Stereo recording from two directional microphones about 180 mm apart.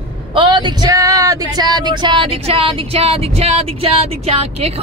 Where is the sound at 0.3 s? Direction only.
25° right (ahead or behind).